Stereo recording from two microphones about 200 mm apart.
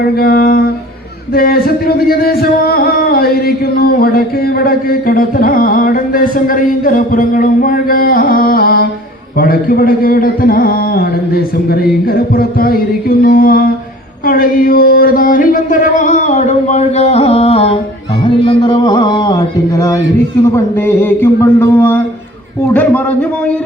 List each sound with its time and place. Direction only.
0.0 s speech: 50° left (ahead or behind); by 19.9 s 20° left (ahead or behind)
20.7 s mantra: 10° left (ahead or behind)